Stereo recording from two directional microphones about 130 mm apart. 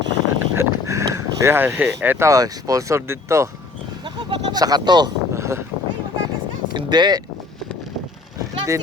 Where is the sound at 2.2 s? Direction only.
30° right (ahead or behind).